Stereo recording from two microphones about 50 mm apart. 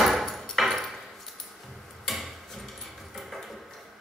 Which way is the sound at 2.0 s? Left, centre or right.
Centre.